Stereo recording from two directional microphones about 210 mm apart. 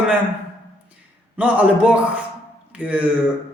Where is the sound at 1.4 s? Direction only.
5° right (ahead or behind).